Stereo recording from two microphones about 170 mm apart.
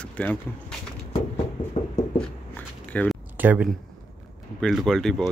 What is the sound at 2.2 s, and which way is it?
Shuffling cards, 10° left (ahead or behind).